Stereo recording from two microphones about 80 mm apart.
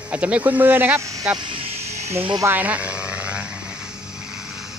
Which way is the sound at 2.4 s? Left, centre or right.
Right.